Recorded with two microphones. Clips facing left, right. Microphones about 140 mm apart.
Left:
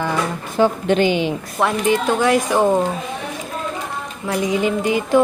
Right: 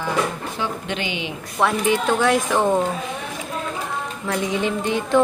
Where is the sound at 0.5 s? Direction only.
40° left (ahead or behind).